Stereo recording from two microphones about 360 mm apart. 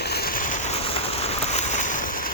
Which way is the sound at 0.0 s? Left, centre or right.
Left.